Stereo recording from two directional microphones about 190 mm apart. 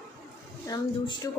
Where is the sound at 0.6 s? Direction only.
20° left (ahead or behind).